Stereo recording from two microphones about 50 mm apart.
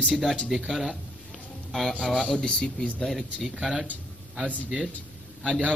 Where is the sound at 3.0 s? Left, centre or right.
Centre.